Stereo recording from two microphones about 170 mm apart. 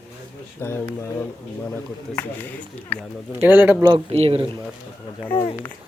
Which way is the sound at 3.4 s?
10° right (ahead or behind).